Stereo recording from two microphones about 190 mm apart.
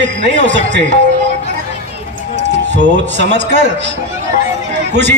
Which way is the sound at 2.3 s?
65° right (ahead or behind).